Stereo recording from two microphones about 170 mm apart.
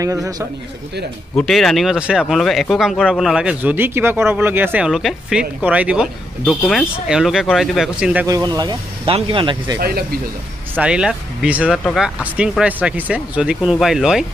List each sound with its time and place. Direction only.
0.0 s speech: 20° right (ahead or behind)
1.3 s speech: centre (ahead or behind)
8.3 s speech: 20° right (ahead or behind)
9.8 s speech: 65° right (ahead or behind)
10.8 s speech: 5° right (ahead or behind)